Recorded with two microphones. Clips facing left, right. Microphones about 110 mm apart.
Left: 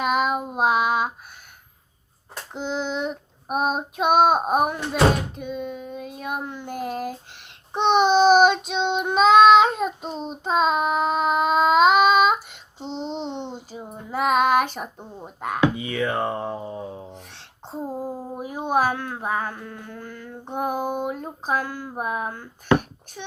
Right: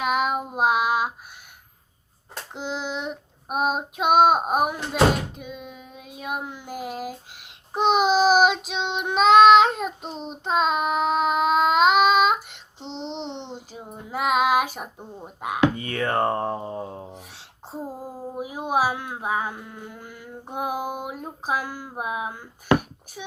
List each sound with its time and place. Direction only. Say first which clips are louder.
0.0 s child singing: left 1 dB; centre (ahead or behind)
2.5 s child singing: left 3 dB; 5° right (ahead or behind)
13.1 s a sound: left 1 dB; 45° left (ahead or behind)
14.1 s child singing: left 2 dB; 5° right (ahead or behind)
15.4 s speech: left 1 dB; 10° right (ahead or behind)
15.7 s speech: even; 50° right (ahead or behind)
17.1 s speech: even; 5° right (ahead or behind)